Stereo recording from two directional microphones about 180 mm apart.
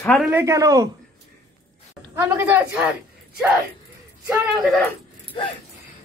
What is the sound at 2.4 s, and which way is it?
Speech, 10° right (ahead or behind).